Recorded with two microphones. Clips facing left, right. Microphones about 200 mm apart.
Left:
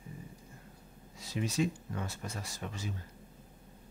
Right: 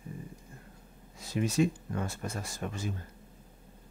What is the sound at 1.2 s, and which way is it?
Speech, 55° right (ahead or behind).